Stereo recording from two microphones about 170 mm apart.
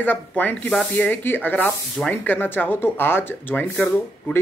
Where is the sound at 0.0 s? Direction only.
10° left (ahead or behind).